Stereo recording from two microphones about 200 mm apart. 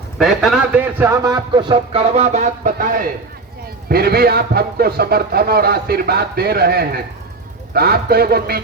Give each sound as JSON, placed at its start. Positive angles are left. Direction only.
{"t": 0.2, "sound": "a man's voice", "side_deg": 0}